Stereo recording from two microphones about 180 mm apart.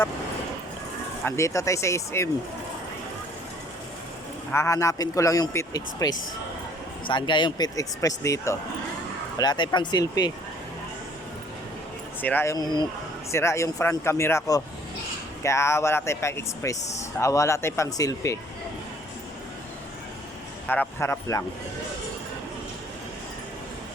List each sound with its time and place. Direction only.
1.2 s a man's voice: 15° left (ahead or behind)
4.5 s a man's voice: 15° left (ahead or behind)
12.2 s a man's voice: 10° left (ahead or behind)
20.7 s a man's voice: 10° left (ahead or behind)